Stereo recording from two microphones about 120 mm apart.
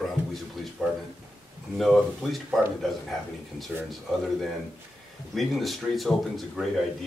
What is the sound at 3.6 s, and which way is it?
Speech, centre (ahead or behind).